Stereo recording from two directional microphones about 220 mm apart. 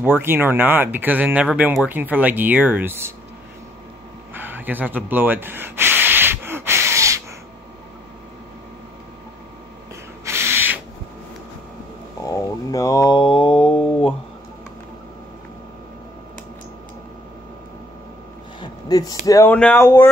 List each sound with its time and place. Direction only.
0.0 s speech: 10° right (ahead or behind)
4.3 s sanding: 10° right (ahead or behind)
10.2 s a sound: 10° right (ahead or behind)
12.3 s mantra: 15° left (ahead or behind)
18.6 s speech: 15° left (ahead or behind)